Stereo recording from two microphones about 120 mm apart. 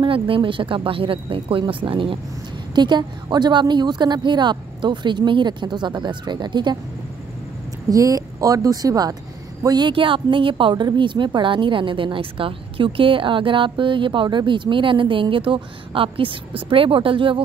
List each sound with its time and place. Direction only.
0.0 s a woman's voice: 45° right (ahead or behind)
7.9 s speech: 30° right (ahead or behind); by 17.4 s 45° right (ahead or behind)